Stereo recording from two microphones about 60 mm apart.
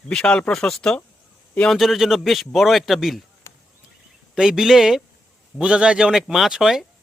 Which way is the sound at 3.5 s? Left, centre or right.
Left.